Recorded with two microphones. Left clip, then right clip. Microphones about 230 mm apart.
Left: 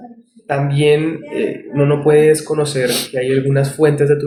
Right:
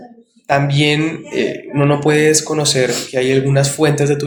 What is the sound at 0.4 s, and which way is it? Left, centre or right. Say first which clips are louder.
Speech: even; right.